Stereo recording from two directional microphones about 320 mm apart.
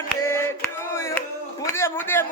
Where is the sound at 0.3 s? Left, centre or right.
Centre.